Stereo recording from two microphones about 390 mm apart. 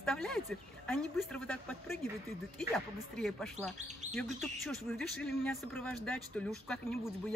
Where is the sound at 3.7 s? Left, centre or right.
Centre.